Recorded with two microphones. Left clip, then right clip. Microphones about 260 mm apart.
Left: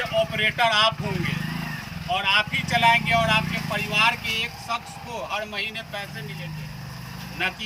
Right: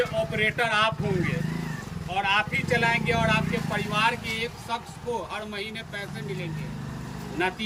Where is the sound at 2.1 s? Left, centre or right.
Centre.